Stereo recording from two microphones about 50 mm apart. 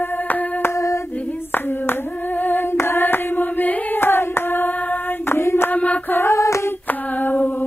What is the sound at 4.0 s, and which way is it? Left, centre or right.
Hands, left.